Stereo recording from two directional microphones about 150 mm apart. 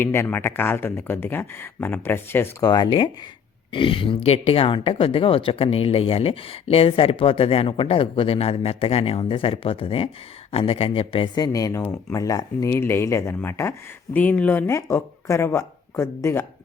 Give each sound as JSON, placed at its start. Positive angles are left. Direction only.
{"t": 0.0, "sound": "speech", "side_deg": 15}
{"t": 2.6, "sound": "speech", "side_deg": 30}